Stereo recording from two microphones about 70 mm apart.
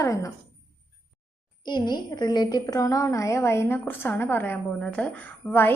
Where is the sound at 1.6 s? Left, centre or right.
Left.